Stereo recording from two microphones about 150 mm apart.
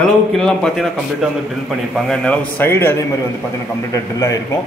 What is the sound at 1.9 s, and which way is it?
A man's voice, 5° left (ahead or behind).